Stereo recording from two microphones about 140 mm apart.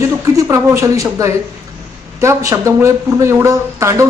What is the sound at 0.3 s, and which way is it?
A man's voice, 20° right (ahead or behind).